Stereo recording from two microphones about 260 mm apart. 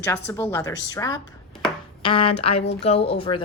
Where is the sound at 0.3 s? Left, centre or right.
Centre.